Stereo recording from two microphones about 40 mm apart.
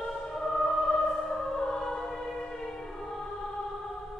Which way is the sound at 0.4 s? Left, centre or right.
Centre.